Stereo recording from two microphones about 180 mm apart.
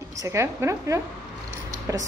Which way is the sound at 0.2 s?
15° right (ahead or behind).